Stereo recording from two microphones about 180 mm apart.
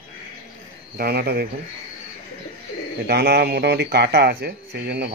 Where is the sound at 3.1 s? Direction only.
65° right (ahead or behind).